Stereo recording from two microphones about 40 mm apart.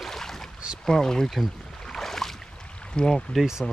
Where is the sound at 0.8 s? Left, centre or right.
Centre.